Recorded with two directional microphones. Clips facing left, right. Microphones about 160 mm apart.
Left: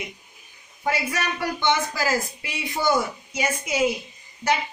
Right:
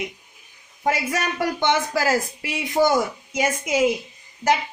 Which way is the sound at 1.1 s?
50° right (ahead or behind).